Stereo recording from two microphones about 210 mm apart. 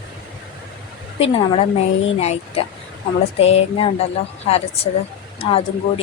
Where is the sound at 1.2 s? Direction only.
30° left (ahead or behind).